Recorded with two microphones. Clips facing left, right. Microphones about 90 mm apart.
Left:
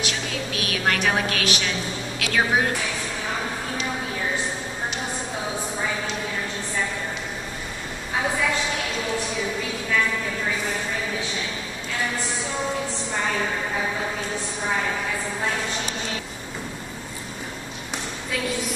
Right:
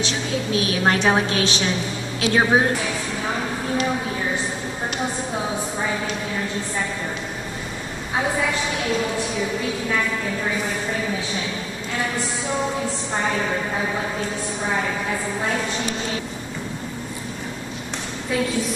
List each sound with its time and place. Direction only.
0.0 s a woman's voice: 25° right (ahead or behind)